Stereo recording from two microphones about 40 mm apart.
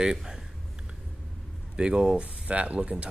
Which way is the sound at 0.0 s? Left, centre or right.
Centre.